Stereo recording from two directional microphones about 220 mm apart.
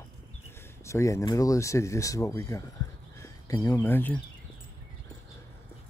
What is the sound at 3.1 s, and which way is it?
Speech, 15° left (ahead or behind).